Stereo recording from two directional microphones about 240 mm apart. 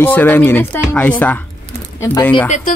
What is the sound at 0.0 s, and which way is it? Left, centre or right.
Speech, centre.